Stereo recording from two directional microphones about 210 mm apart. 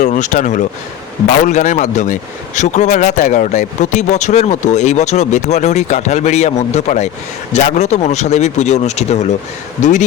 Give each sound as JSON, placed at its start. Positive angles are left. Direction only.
{"t": 0.0, "sound": "speech", "side_deg": 35}